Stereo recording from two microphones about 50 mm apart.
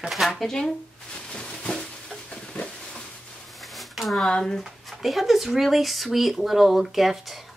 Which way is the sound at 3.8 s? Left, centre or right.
Centre.